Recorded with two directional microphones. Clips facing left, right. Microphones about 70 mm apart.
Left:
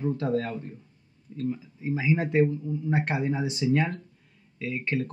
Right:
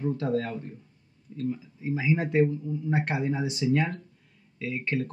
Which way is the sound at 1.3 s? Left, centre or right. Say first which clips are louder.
Left 1 dB; left.